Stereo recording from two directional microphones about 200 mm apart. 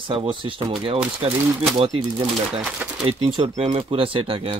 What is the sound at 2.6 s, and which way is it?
Speech, 5° right (ahead or behind).